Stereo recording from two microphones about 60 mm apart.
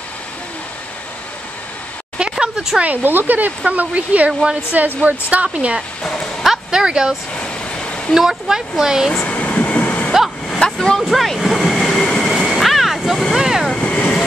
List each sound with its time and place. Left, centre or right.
2.1 s a sound: centre
2.8 s speech: right
4.3 s a woman's voice: centre
4.7 s speech: right
6.4 s speech: centre
7.3 s vehicle: centre
8.1 s a woman's voice: centre
9.1 s vehicle: centre
10.5 s a sound: centre
11.1 s waves: centre
13.4 s vehicle: centre
13.7 s vehicle: centre